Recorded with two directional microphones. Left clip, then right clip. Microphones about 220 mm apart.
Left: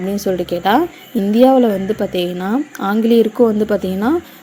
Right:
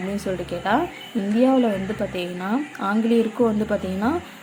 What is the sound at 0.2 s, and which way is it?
A woman's voice, 25° left (ahead or behind).